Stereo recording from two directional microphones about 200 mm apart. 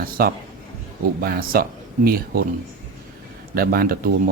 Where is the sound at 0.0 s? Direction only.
45° right (ahead or behind).